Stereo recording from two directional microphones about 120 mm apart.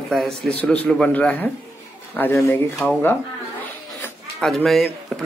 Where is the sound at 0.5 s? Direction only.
10° left (ahead or behind).